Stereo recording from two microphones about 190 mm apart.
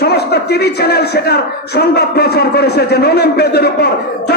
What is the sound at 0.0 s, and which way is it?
A man's voice, 55° left (ahead or behind).